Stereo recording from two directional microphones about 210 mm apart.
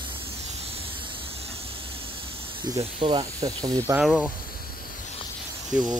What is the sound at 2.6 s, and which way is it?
Speech, 20° right (ahead or behind).